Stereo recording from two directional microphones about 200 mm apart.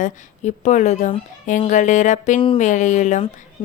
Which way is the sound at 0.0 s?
35° left (ahead or behind).